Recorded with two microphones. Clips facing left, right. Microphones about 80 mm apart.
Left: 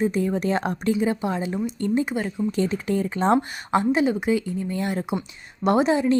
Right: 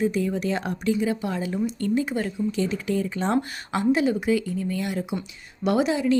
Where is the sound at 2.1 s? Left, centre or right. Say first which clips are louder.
Even; centre.